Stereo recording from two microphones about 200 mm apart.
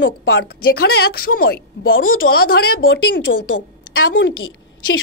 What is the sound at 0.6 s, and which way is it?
Speech, 50° left (ahead or behind).